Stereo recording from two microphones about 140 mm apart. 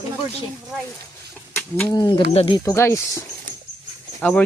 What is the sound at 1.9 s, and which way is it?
Speech, 30° left (ahead or behind).